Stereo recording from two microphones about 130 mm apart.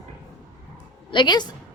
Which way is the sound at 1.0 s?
35° left (ahead or behind).